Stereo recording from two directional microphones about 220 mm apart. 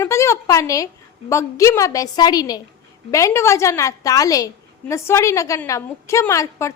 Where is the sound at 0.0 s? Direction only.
15° left (ahead or behind).